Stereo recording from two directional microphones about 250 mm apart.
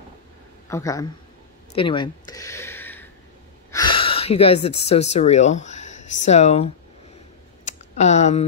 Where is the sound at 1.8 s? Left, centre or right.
Centre.